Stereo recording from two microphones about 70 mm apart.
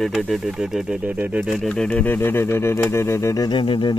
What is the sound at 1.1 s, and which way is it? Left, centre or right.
Speech, centre.